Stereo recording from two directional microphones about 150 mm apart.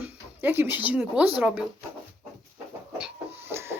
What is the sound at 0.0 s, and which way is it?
Speech, 15° right (ahead or behind).